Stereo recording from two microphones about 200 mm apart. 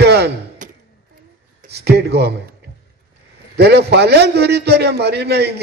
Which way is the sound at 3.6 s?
55° right (ahead or behind).